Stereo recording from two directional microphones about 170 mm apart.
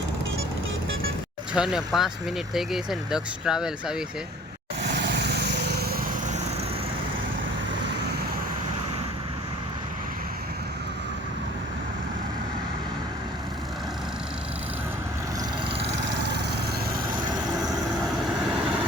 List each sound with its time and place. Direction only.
1.5 s speech: 5° right (ahead or behind)
4.9 s vehicle: 85° right